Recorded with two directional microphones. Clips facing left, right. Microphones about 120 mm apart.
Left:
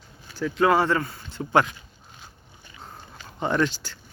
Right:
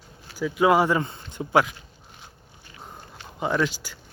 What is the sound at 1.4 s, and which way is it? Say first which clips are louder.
Speech: even; 5° right (ahead or behind).